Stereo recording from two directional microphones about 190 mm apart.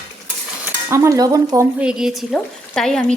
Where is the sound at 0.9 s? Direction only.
15° right (ahead or behind).